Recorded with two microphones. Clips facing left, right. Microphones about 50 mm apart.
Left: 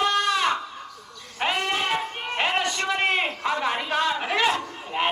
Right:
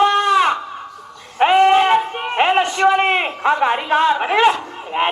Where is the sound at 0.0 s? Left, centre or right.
Right.